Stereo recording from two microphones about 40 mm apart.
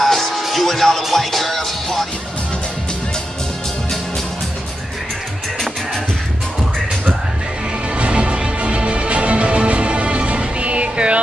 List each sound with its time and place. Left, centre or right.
0.0 s music: centre
8.0 s music: right